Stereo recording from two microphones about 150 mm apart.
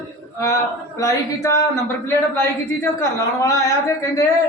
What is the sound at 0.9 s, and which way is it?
A man's voice, 20° left (ahead or behind).